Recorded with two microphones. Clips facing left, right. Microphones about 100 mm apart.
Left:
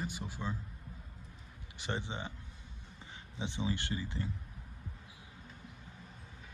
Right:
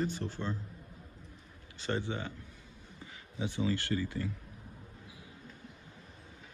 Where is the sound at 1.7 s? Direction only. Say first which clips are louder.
Right 4 dB; 15° left (ahead or behind).